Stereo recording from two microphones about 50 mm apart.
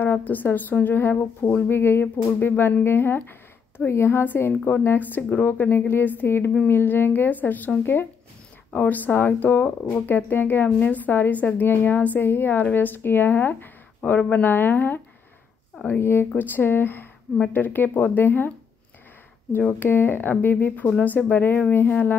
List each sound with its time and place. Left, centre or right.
0.0 s speech: left
3.9 s a woman's voice: left
4.2 s speech: left
16.0 s speech: left
16.3 s speech: left
19.8 s speech: left
20.7 s speech: left